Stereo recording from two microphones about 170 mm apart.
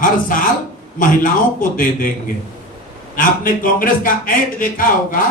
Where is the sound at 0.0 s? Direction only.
55° left (ahead or behind).